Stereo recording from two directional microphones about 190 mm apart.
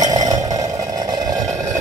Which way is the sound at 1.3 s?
Centre (ahead or behind).